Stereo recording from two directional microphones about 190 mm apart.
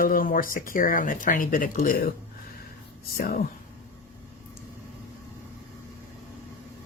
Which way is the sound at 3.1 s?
50° left (ahead or behind).